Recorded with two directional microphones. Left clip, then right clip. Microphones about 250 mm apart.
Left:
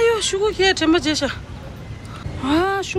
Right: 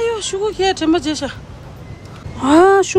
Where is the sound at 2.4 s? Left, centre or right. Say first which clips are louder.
Right 9 dB; right.